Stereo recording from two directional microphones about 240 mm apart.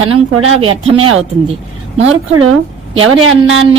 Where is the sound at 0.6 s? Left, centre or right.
Right.